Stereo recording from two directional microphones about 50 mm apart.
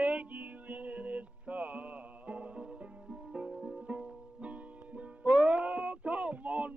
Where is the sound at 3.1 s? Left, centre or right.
Centre.